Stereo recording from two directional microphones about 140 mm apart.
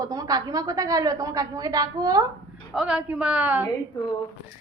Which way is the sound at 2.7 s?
5° right (ahead or behind).